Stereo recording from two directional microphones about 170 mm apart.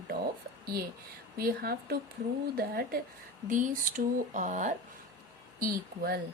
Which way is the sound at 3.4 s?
50° right (ahead or behind).